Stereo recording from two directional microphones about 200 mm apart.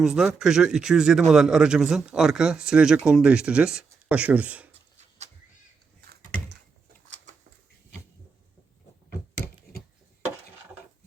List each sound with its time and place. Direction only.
0.0 s speech: 5° right (ahead or behind)